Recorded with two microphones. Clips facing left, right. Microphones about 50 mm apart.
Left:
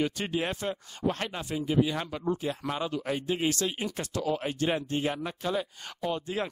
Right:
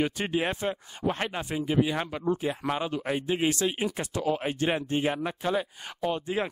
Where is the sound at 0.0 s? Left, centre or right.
Right.